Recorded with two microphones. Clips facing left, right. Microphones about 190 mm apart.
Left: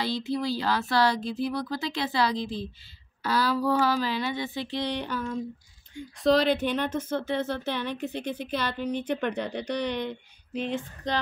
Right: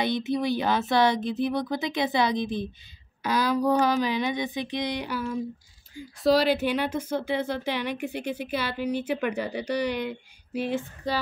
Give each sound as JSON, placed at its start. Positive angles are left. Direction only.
{"t": 0.0, "sound": "speech", "side_deg": -20}